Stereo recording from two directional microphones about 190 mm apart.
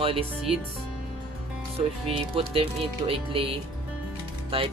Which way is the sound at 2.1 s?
30° right (ahead or behind).